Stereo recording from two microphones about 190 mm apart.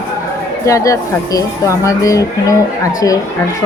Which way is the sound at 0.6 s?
15° left (ahead or behind).